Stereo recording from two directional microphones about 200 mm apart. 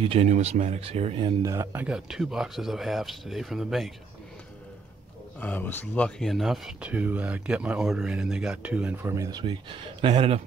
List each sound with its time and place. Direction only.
0.0 s speech: 30° right (ahead or behind)
1.4 s speech: 15° right (ahead or behind)
5.4 s speech: 10° left (ahead or behind); by 10.4 s 25° right (ahead or behind)